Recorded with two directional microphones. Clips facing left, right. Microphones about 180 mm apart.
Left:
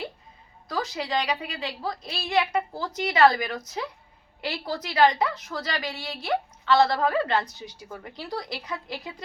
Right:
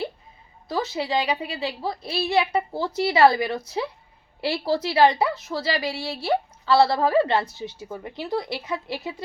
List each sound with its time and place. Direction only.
0.7 s a woman's voice: 25° right (ahead or behind)